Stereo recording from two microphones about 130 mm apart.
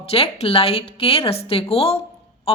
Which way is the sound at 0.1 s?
50° left (ahead or behind).